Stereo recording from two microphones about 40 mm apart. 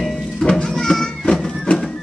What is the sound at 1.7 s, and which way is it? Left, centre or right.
Music, left.